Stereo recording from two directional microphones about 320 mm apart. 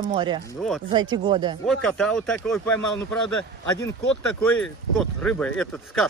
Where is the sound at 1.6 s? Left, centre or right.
Centre.